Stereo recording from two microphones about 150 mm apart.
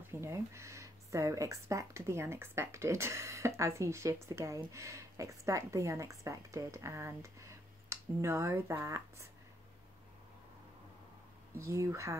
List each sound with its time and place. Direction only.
0.0 s speech: 15° right (ahead or behind)
11.5 s speech: 20° right (ahead or behind)